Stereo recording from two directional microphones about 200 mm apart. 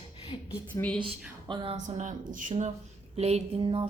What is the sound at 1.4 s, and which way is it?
Speech, 25° right (ahead or behind).